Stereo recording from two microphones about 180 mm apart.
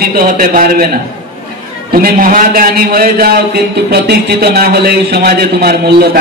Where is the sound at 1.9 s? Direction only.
55° right (ahead or behind).